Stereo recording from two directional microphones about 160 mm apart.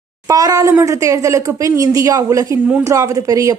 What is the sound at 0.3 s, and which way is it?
Speech, 20° right (ahead or behind).